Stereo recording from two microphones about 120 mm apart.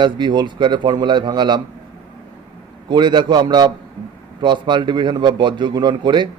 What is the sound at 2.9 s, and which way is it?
A man's voice, 40° right (ahead or behind).